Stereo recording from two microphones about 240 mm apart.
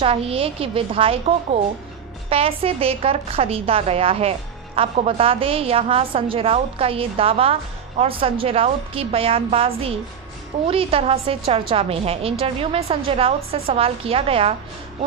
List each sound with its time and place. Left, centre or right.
0.0 s a woman's voice: right
2.3 s a woman's voice: right